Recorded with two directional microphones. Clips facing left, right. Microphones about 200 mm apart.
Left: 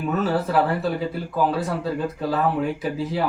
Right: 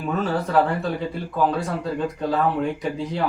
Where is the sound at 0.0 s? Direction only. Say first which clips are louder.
Left 1 dB; 5° left (ahead or behind).